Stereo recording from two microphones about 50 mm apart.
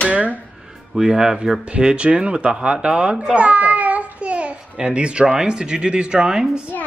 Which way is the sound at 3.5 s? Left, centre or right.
Right.